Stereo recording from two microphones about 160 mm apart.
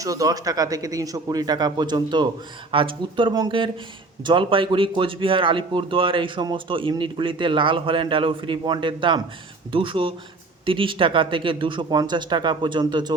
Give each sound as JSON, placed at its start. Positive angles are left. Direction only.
{"t": 0.0, "sound": "speech", "side_deg": -20}